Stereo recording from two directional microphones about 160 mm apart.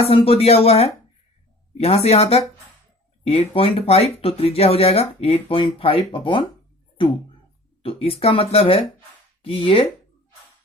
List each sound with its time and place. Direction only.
0.0 s speech: 35° left (ahead or behind)
7.8 s speech: 35° left (ahead or behind)